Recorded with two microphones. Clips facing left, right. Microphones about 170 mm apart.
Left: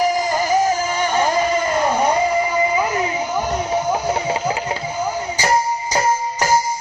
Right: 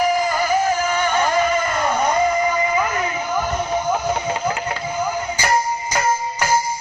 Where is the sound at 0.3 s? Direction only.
40° left (ahead or behind).